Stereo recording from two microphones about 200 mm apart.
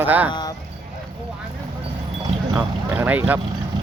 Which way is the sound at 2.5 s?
10° right (ahead or behind).